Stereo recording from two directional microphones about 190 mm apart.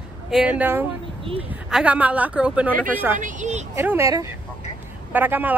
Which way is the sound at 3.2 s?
40° right (ahead or behind).